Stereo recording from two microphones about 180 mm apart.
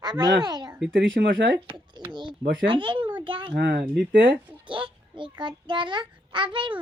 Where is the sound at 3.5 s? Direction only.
60° right (ahead or behind).